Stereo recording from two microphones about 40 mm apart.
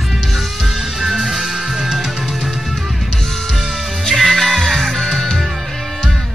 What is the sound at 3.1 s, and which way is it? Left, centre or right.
Music, centre.